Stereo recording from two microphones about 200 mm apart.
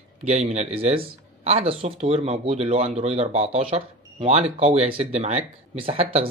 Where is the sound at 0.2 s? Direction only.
35° right (ahead or behind).